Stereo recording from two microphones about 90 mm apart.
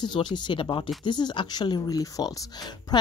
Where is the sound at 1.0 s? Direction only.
55° left (ahead or behind).